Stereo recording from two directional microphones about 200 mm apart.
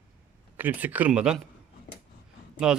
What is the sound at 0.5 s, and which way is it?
Speech, 10° right (ahead or behind).